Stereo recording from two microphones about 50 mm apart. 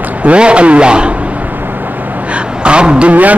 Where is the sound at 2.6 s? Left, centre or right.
Centre.